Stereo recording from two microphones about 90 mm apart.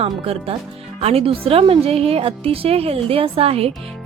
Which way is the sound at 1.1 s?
90° right.